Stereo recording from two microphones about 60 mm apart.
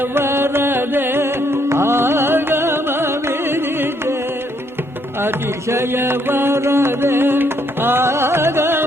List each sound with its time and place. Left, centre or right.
0.1 s music: right
5.2 s music: right